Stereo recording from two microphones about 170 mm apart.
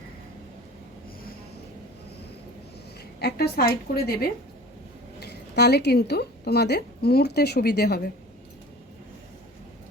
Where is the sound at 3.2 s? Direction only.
70° left (ahead or behind).